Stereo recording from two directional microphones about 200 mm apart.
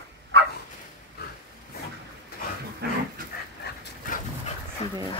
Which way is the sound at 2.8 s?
55° right (ahead or behind).